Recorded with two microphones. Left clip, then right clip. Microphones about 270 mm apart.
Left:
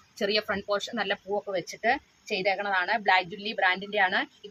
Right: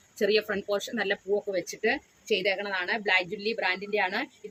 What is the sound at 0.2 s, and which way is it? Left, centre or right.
A woman's voice, left.